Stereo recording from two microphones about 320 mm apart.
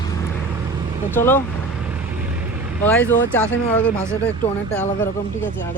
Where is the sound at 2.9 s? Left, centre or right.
Centre.